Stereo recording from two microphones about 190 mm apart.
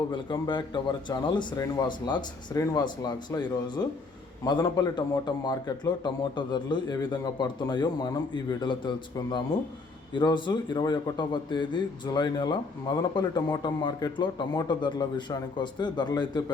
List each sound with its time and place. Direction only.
0.1 s a man's voice: 25° left (ahead or behind)